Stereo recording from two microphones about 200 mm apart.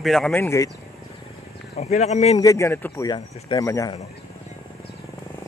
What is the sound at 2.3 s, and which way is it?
Speech, 15° left (ahead or behind).